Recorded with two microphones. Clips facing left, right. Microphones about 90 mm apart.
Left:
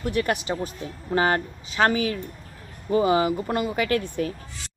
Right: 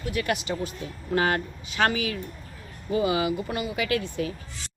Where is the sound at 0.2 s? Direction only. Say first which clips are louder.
Left 2 dB; 35° left (ahead or behind).